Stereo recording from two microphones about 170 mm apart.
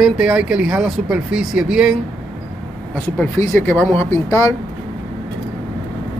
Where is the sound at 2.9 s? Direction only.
10° left (ahead or behind).